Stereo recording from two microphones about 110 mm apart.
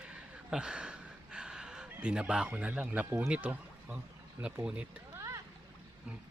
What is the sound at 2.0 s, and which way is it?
Speech, 10° right (ahead or behind).